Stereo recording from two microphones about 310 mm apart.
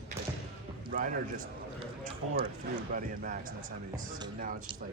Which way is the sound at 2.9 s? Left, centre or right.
Right.